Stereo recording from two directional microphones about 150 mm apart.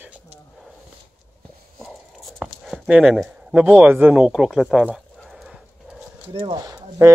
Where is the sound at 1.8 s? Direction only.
Centre (ahead or behind).